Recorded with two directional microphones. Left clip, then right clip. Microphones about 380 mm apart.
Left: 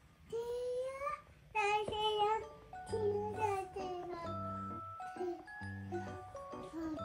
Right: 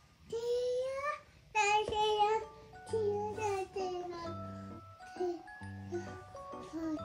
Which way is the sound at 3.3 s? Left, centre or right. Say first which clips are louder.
Right 1 dB; centre.